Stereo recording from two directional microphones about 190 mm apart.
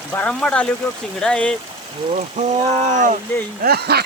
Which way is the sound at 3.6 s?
55° right (ahead or behind).